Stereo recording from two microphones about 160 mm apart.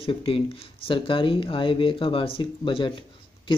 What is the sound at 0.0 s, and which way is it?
Speech, 35° left (ahead or behind).